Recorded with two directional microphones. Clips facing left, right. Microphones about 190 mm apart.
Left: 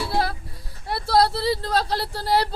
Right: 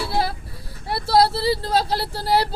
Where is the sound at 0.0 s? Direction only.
Centre (ahead or behind).